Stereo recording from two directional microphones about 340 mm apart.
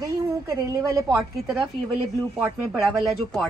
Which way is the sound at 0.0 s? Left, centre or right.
Centre.